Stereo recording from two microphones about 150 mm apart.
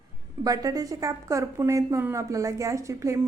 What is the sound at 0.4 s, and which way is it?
A woman's voice, 25° right (ahead or behind).